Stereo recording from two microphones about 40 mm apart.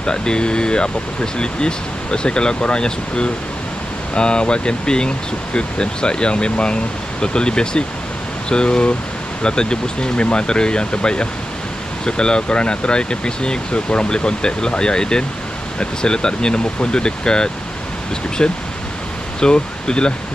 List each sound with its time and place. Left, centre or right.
0.0 s speech: left